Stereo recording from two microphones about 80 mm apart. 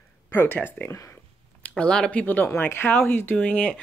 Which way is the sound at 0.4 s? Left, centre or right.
Left.